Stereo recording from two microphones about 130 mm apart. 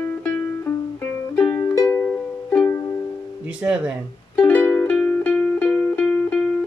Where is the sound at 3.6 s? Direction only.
15° right (ahead or behind).